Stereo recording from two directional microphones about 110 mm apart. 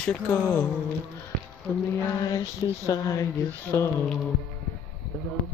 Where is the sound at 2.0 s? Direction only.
35° left (ahead or behind).